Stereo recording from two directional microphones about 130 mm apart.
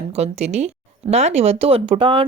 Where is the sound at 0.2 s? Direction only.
55° right (ahead or behind).